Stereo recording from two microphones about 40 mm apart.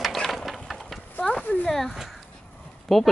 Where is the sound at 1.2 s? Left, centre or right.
Left.